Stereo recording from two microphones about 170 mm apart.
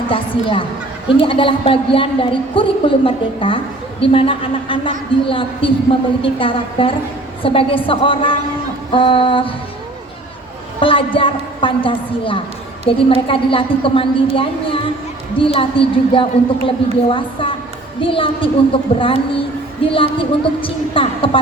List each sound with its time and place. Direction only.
0.1 s a woman's voice: 30° left (ahead or behind)
10.8 s a woman's voice: 30° left (ahead or behind)
15.4 s a woman's voice: 30° left (ahead or behind)